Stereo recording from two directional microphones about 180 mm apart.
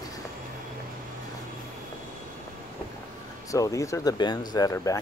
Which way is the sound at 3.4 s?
20° left (ahead or behind).